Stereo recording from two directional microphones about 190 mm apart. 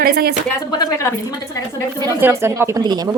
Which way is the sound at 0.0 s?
55° right (ahead or behind).